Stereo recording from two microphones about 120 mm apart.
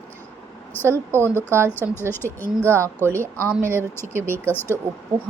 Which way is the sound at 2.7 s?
20° right (ahead or behind).